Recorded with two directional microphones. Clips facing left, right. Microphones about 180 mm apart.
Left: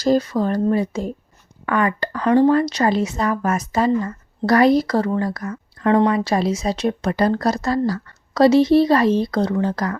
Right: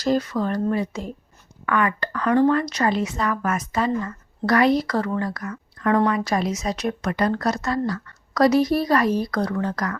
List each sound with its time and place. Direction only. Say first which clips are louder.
0.0 s speech: left 4 dB; 35° left (ahead or behind)